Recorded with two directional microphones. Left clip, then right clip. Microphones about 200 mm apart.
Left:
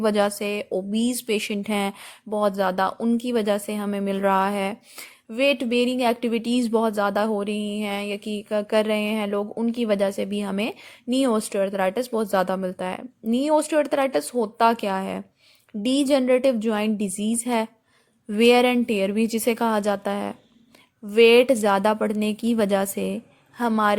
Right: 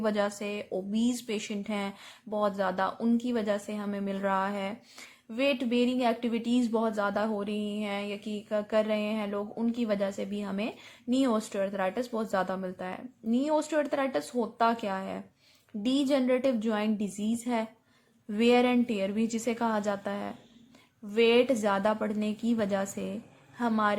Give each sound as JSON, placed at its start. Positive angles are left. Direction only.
{"t": 0.0, "sound": "speech", "side_deg": 45}